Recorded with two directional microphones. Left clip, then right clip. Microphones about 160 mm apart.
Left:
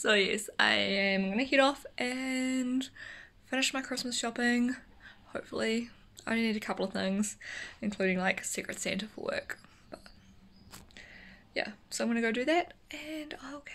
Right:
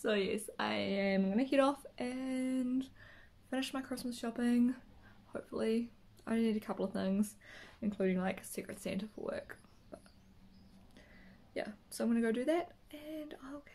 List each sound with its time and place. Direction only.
0.0 s speech: centre (ahead or behind); by 1.8 s 15° right (ahead or behind)
2.0 s speech: centre (ahead or behind)
11.5 s speech: 10° right (ahead or behind)